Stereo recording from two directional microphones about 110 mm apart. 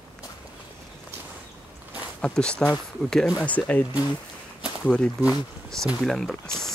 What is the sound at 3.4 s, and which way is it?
Speech, 15° left (ahead or behind).